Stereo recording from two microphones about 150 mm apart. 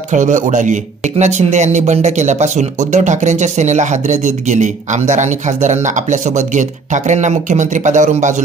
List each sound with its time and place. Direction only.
0.1 s speech: 55° right (ahead or behind)